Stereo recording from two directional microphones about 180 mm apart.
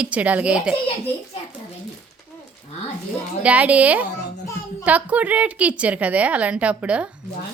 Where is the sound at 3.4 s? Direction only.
10° right (ahead or behind).